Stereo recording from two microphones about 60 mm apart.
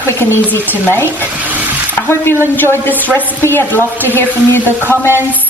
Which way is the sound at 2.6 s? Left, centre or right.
Left.